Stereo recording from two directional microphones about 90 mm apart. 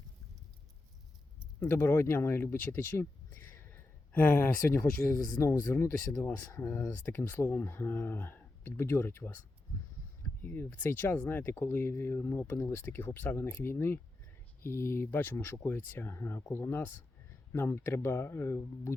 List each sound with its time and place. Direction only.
1.5 s speech: 25° left (ahead or behind)
10.4 s speech: 20° left (ahead or behind)